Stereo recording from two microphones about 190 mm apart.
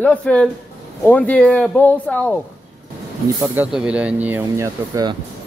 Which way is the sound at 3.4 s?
10° right (ahead or behind).